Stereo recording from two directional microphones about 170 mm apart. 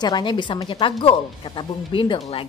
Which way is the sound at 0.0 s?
25° left (ahead or behind).